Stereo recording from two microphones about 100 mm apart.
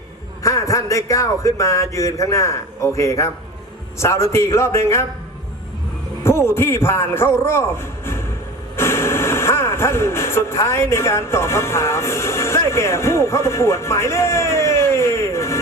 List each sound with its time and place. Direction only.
0.4 s a man's voice: 35° left (ahead or behind)
6.2 s a man's voice: 25° left (ahead or behind)